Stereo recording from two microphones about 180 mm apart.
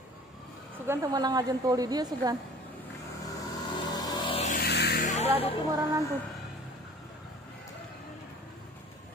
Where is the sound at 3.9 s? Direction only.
20° left (ahead or behind).